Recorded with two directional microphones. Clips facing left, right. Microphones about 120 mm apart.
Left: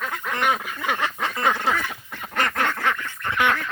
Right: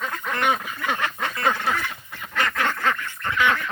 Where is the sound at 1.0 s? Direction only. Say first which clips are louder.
Left 1 dB; 25° left (ahead or behind).